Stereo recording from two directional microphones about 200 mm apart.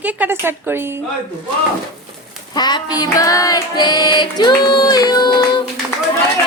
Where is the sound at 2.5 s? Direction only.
20° left (ahead or behind).